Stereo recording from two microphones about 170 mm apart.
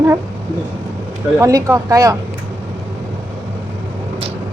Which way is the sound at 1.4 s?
20° right (ahead or behind).